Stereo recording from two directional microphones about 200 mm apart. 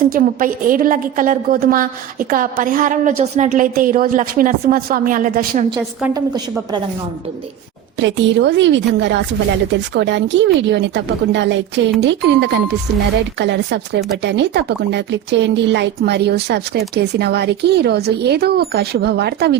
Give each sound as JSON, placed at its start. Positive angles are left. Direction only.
{"t": 0.1, "sound": "a woman's voice", "side_deg": -45}
{"t": 7.9, "sound": "speech", "side_deg": -65}